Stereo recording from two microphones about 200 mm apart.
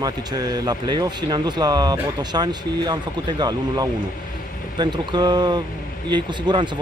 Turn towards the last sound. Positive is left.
turn(degrees=-25)  # may be behind; listen again after turning